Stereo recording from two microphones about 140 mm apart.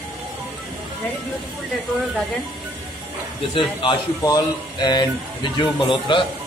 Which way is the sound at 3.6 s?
35° left (ahead or behind).